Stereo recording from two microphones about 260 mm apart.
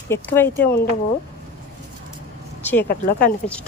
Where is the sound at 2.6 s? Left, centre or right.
Centre.